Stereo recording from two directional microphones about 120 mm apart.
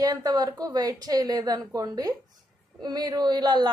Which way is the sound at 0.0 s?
30° right (ahead or behind).